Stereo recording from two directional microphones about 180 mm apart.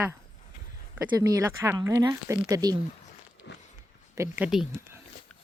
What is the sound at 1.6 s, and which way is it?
A woman's voice, 15° right (ahead or behind).